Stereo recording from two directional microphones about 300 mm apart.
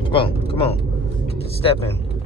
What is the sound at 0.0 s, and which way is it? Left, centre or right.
Vehicle, centre.